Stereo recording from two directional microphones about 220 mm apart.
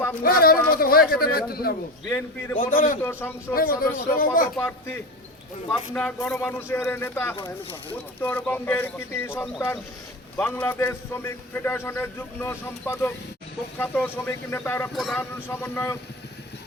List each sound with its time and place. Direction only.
0.2 s a man's voice: 40° left (ahead or behind)
2.0 s a man's voice: 10° left (ahead or behind)
2.7 s speech: 35° left (ahead or behind)
3.0 s a man's voice: 10° left (ahead or behind)
3.5 s speech: 40° left (ahead or behind)
4.5 s a man's voice: 10° left (ahead or behind)
7.3 s speech: 20° left (ahead or behind)
8.2 s a man's voice: 5° left (ahead or behind)